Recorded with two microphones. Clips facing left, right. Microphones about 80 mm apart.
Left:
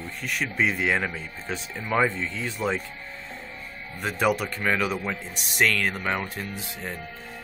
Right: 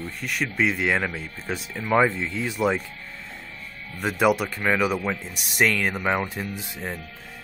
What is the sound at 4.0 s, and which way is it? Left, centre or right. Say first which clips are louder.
Speech: right 3 dB; centre.